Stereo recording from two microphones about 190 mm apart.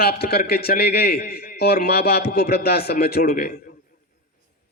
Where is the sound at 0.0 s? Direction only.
55° left (ahead or behind).